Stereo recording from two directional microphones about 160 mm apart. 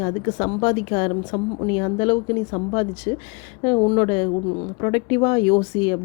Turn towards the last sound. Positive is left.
turn(degrees=30)  # may be behind; listen again after turning